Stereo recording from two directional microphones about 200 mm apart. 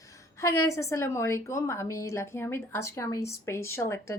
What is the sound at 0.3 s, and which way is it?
A woman's voice, 15° left (ahead or behind).